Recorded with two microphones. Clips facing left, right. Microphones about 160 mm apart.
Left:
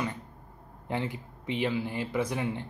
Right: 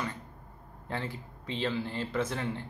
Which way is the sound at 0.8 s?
15° left (ahead or behind).